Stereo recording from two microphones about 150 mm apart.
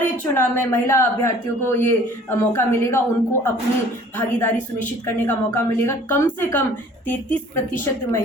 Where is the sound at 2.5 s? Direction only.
15° left (ahead or behind).